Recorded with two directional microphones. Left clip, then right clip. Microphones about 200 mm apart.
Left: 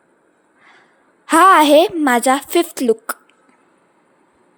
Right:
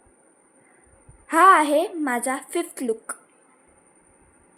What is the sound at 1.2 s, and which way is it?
A woman's voice, 45° left (ahead or behind).